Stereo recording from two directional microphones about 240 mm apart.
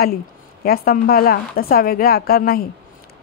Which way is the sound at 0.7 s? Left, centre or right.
Left.